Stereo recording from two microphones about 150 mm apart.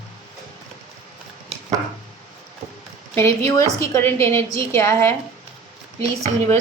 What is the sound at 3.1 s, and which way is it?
A woman's voice, 20° left (ahead or behind).